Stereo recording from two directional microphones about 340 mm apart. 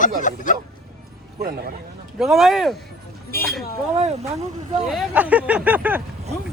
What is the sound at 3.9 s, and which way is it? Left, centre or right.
Speech, centre.